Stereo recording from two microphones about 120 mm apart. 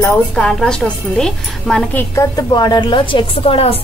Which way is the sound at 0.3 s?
5° left (ahead or behind).